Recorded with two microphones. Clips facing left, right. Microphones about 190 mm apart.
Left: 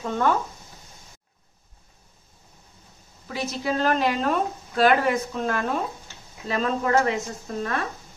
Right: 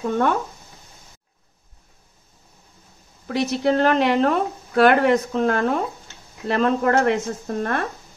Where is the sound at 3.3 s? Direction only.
65° right (ahead or behind).